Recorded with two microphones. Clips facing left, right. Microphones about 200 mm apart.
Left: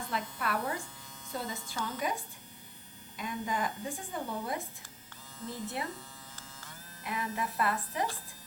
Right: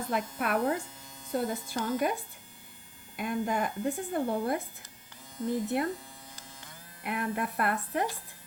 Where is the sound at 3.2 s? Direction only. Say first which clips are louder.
Right 5 dB; 55° right (ahead or behind).